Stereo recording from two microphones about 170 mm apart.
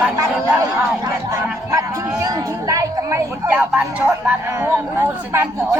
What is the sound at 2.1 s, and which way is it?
Speech, 20° right (ahead or behind).